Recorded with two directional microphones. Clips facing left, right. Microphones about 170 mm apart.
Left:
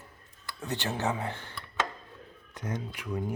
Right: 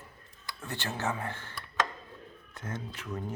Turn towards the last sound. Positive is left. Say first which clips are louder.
# left 4 dB
turn(degrees=10)  # may be behind; listen again after turning